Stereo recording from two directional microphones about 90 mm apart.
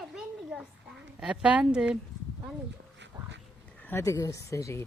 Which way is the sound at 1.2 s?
10° right (ahead or behind).